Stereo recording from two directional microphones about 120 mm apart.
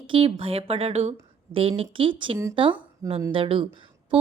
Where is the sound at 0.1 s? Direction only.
50° right (ahead or behind).